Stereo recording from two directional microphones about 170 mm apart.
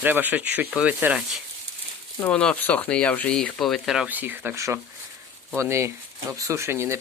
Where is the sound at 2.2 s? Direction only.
5° left (ahead or behind).